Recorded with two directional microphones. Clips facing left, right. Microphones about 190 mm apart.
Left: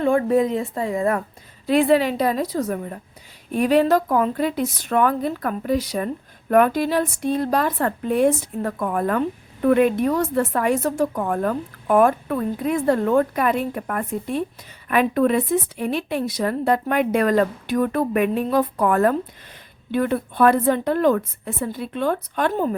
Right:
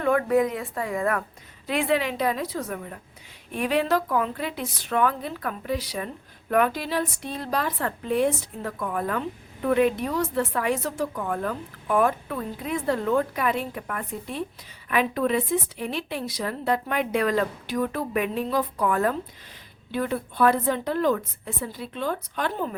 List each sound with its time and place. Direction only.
0.0 s speech: 30° left (ahead or behind)
1.6 s a woman's voice: 35° left (ahead or behind)